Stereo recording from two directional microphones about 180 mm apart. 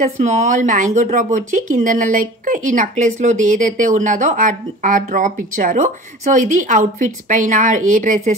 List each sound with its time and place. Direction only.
0.2 s speech: 40° right (ahead or behind)